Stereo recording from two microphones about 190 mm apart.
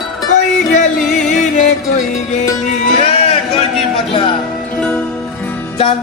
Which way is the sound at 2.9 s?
30° left (ahead or behind).